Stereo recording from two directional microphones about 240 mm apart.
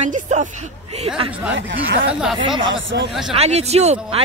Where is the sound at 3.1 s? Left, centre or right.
Centre.